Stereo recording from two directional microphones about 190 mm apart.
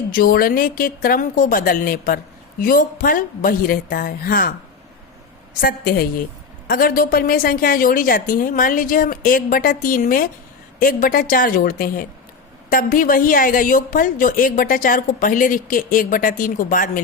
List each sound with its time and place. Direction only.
0.1 s a woman's voice: 50° left (ahead or behind)
5.5 s a woman's voice: 50° left (ahead or behind)